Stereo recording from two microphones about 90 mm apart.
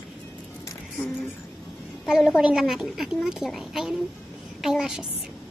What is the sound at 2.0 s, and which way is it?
A woman's voice, centre (ahead or behind).